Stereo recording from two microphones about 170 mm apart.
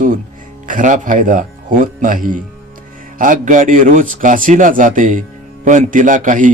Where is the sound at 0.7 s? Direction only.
50° right (ahead or behind).